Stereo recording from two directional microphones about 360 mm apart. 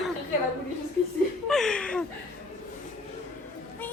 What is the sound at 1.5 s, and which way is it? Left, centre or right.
Speech, centre.